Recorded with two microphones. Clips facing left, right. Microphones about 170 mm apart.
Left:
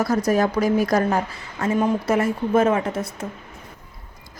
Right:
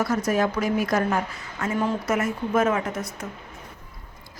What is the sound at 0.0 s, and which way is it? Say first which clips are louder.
A woman's voice: left 3 dB; 35° left (ahead or behind).